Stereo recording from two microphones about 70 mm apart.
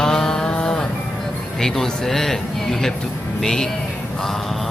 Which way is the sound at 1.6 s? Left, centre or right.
Centre.